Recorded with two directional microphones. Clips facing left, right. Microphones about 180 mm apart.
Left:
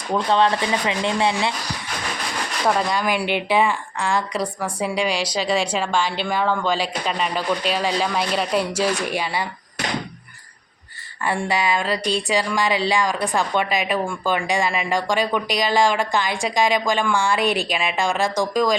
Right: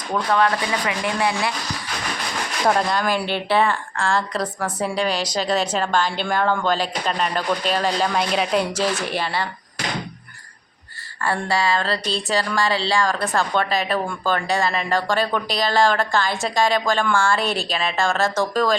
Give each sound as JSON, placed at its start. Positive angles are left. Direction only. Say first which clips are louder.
{"t": 0.1, "sound": "speech", "louder": "left 1 dB", "side_deg": 25}
{"t": 2.9, "sound": "speech", "louder": "even", "side_deg": 10}
{"t": 11.2, "sound": "speech", "louder": "even", "side_deg": 15}